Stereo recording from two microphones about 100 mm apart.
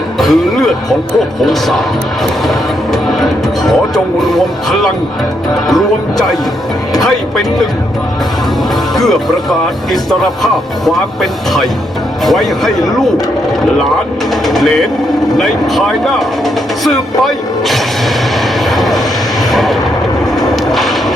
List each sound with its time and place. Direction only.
0.2 s speech: 5° left (ahead or behind)
9.0 s speech: centre (ahead or behind)
14.4 s speech: centre (ahead or behind)
18.7 s vehicle: centre (ahead or behind)
19.5 s a sound: centre (ahead or behind)